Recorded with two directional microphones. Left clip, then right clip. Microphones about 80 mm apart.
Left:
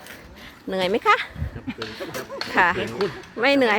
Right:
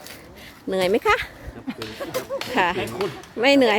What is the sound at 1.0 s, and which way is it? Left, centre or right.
Speech, right.